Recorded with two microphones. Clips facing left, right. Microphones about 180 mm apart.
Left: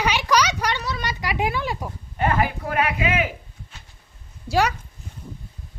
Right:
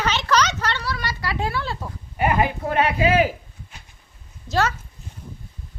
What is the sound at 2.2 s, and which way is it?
Speech, 15° right (ahead or behind).